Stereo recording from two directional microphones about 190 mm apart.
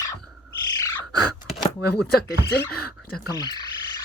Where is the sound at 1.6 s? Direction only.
5° left (ahead or behind).